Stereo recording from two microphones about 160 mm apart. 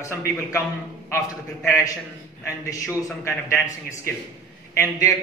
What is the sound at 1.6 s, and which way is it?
A man's voice, 20° left (ahead or behind).